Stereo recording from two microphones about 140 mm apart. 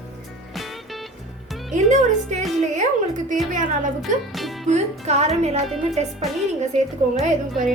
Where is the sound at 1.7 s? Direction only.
60° right (ahead or behind).